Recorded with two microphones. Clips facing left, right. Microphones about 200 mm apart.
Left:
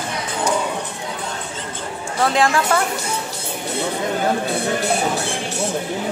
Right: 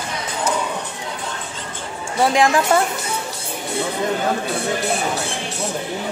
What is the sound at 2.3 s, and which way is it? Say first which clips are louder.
Speech: right 2 dB; 15° right (ahead or behind).